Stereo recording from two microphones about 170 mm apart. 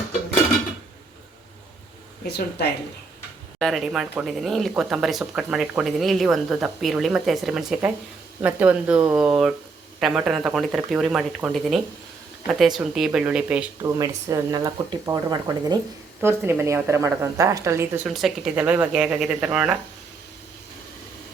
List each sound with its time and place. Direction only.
2.2 s speech: 75° left (ahead or behind)
3.6 s a woman's voice: centre (ahead or behind)
12.5 s a woman's voice: centre (ahead or behind)
14.0 s a woman's voice: 20° right (ahead or behind)
18.0 s speech: centre (ahead or behind)